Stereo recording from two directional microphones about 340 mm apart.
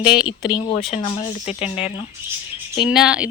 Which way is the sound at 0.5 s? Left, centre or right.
Centre.